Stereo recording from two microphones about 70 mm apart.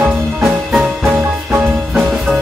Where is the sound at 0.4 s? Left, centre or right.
Centre.